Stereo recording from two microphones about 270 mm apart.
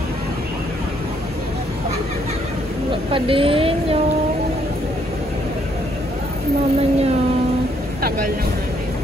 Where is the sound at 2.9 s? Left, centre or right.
Centre.